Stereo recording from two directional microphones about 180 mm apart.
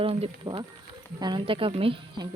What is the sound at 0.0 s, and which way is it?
Speech, 30° right (ahead or behind).